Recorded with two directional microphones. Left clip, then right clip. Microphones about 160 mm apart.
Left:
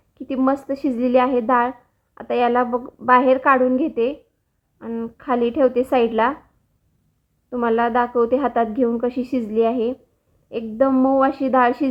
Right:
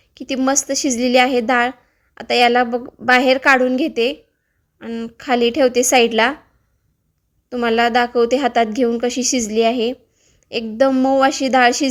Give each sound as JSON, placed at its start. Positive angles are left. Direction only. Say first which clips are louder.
{"t": 0.1, "sound": "a sound", "louder": "right 4 dB", "side_deg": -20}
{"t": 0.4, "sound": "a woman's voice", "louder": "right 3 dB", "side_deg": -15}
{"t": 7.5, "sound": "a woman's voice", "louder": "right 3 dB", "side_deg": -20}